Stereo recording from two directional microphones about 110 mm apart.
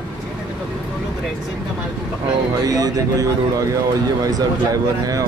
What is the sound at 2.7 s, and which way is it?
Speech, 35° right (ahead or behind).